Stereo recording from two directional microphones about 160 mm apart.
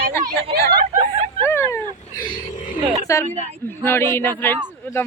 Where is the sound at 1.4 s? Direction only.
15° left (ahead or behind).